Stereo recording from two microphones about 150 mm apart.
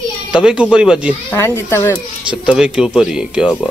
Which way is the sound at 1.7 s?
15° left (ahead or behind).